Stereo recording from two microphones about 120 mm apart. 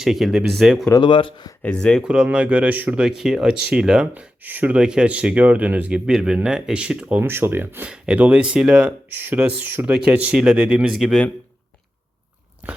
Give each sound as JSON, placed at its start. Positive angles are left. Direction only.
{"t": 0.0, "sound": "speech", "side_deg": 0}
{"t": 0.9, "sound": "speech", "side_deg": 40}
{"t": 1.6, "sound": "speech", "side_deg": 10}
{"t": 2.0, "sound": "speech", "side_deg": -10}